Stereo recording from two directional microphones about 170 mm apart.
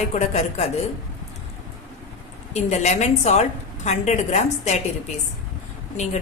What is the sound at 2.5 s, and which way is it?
A woman's voice, 40° left (ahead or behind).